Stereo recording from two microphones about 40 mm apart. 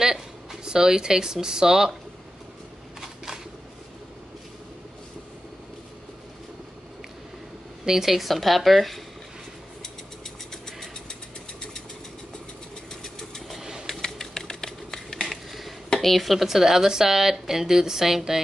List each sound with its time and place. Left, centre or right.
0.0 s speech: centre
7.8 s speech: centre
10.5 s vehicle: centre
13.0 s engine: centre
13.6 s pigeon: centre
13.8 s a sound: centre
15.2 s a sound: centre
16.0 s speech: centre